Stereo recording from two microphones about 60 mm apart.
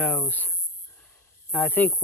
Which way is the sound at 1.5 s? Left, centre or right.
Left.